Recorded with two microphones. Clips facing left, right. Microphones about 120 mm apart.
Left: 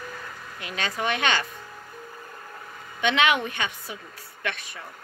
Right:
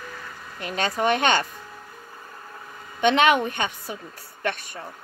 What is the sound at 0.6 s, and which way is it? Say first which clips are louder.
Speech: right 5 dB; 40° right (ahead or behind).